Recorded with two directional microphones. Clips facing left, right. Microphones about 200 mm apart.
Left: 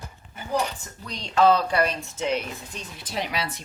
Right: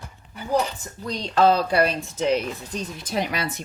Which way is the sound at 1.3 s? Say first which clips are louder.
Right 1 dB; 35° right (ahead or behind).